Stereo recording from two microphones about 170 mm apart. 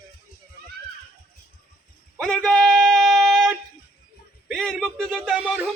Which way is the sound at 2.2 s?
5° left (ahead or behind).